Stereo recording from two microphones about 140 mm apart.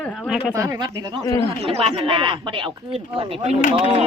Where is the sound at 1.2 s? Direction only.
25° left (ahead or behind).